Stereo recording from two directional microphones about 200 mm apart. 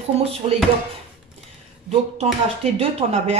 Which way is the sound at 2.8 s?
30° right (ahead or behind).